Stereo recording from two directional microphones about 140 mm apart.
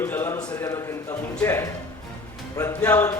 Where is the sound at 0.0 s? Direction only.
15° left (ahead or behind).